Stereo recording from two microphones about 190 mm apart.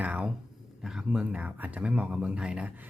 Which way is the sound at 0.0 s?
5° right (ahead or behind).